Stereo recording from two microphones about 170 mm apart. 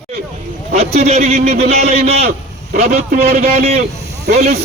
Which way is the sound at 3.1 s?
60° right (ahead or behind).